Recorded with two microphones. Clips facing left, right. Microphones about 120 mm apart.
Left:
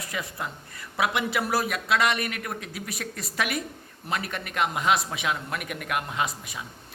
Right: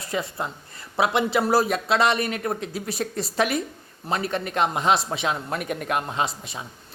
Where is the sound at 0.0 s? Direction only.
30° right (ahead or behind).